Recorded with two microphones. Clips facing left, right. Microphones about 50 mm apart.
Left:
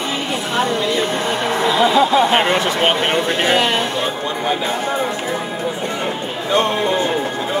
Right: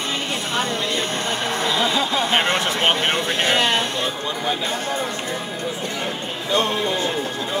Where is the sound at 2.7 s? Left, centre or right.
Centre.